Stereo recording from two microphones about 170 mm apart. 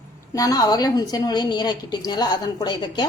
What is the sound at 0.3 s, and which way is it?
A woman's voice, 20° left (ahead or behind).